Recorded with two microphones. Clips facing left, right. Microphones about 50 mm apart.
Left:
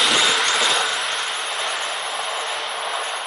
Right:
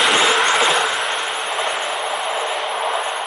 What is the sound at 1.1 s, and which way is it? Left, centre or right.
Vehicle, centre.